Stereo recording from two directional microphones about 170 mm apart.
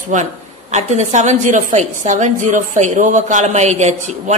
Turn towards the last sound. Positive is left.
turn(degrees=-45)  # may be behind; listen again after turning